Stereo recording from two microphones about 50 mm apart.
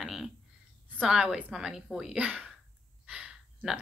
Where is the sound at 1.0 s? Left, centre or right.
Centre.